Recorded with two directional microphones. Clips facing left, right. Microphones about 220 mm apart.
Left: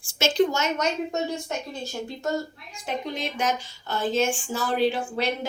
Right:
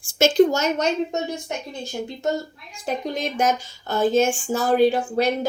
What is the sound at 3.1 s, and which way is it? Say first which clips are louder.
A woman's voice: right 6 dB; 45° right (ahead or behind).